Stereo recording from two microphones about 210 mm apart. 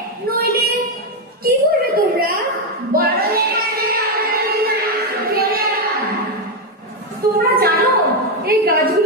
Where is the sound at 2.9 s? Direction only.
45° right (ahead or behind).